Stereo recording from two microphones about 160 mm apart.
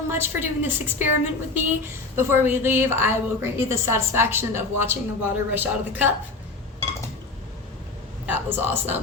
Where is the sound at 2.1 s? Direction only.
15° right (ahead or behind).